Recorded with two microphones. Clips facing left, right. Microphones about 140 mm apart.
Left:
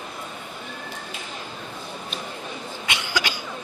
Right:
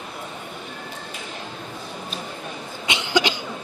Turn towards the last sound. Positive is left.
turn(degrees=-20)  # may be behind; listen again after turning